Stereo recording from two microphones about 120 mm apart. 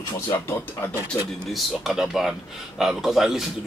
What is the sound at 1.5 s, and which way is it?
A woman's voice, 5° right (ahead or behind).